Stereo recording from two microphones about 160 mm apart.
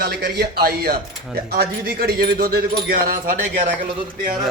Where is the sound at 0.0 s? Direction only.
80° right.